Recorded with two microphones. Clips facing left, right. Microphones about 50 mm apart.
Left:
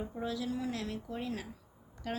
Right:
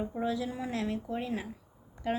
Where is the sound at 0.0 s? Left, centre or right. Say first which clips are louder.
Right 4 dB; right.